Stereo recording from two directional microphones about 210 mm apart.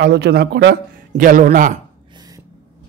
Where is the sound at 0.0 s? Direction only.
50° right (ahead or behind).